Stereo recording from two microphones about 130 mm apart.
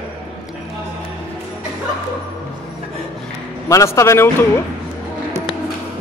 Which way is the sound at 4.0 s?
20° left (ahead or behind).